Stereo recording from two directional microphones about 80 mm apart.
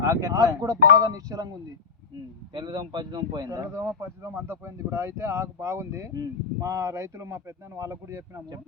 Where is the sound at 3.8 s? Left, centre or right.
Right.